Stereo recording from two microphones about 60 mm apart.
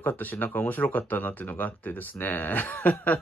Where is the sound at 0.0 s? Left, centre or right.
Left.